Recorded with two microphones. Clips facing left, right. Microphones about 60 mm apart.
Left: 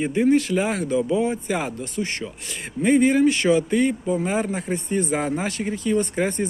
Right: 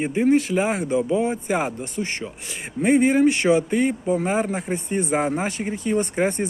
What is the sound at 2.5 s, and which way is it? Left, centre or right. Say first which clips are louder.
A man's voice: even; centre.